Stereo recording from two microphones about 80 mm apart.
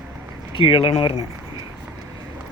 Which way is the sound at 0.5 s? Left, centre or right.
Left.